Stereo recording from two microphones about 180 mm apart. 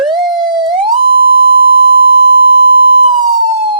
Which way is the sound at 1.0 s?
55° right (ahead or behind).